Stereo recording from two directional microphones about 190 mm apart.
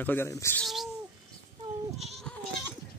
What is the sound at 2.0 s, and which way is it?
Goat, centre (ahead or behind).